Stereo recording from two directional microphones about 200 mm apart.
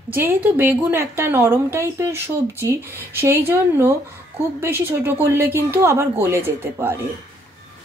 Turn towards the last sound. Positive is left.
turn(degrees=-10)  # may be behind; listen again after turning